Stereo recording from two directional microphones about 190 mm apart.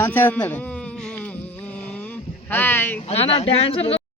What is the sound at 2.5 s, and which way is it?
Speech, 10° left (ahead or behind).